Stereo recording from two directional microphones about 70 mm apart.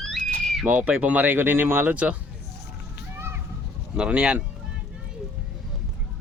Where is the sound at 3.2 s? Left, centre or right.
Right.